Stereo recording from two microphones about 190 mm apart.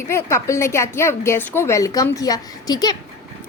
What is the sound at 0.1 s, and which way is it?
A woman's voice, 15° left (ahead or behind).